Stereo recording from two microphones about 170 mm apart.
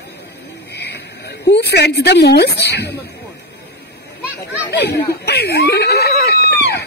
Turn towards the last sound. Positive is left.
turn(degrees=75)  # may be behind; listen again after turning